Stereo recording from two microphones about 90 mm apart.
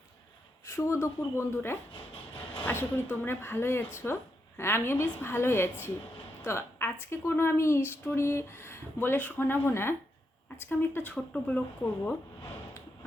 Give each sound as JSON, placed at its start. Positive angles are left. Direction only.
{"t": 0.6, "sound": "a woman's voice", "side_deg": 35}
{"t": 1.9, "sound": "a sound", "side_deg": 70}
{"t": 2.6, "sound": "a woman's voice", "side_deg": 20}